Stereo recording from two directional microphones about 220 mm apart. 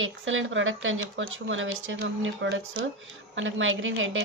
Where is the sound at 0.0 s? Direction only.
60° right (ahead or behind).